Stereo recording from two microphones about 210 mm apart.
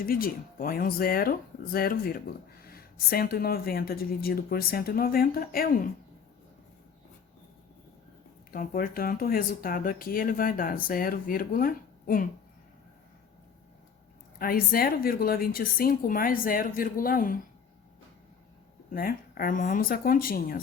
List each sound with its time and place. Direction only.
0.0 s speech: 45° left (ahead or behind)
8.5 s speech: 45° left (ahead or behind)
14.3 s speech: 45° left (ahead or behind)
18.9 s speech: 45° left (ahead or behind)